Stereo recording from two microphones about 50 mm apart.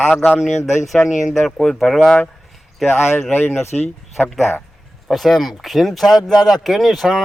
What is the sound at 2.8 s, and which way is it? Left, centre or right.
Speech, left.